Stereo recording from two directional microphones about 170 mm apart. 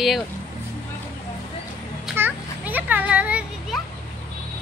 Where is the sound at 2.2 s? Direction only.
10° right (ahead or behind).